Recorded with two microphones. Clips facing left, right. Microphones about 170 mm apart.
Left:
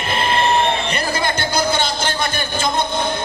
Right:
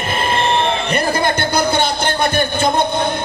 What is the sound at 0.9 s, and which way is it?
Speech, 55° right (ahead or behind).